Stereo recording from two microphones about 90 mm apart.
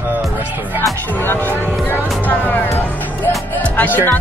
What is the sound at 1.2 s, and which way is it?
Speech, 25° left (ahead or behind).